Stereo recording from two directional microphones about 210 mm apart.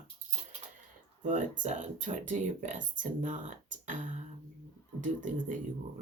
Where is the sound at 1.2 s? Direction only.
35° right (ahead or behind).